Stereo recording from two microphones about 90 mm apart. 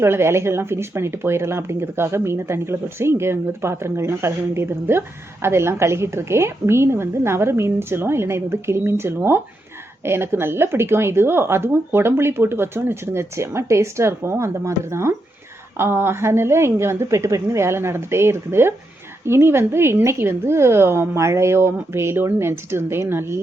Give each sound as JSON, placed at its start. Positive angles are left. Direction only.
{"t": 0.0, "sound": "speech", "side_deg": -30}